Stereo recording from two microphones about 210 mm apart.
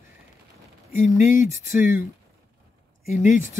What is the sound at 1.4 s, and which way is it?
Speech, 10° right (ahead or behind).